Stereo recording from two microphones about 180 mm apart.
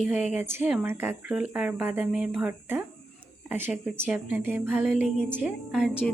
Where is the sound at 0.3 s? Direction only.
10° right (ahead or behind).